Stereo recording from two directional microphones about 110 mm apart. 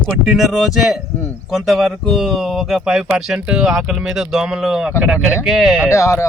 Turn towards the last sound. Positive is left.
turn(degrees=25)  # may be behind; listen again after turning